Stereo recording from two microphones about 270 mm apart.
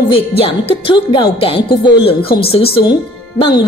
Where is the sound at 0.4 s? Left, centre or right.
Centre.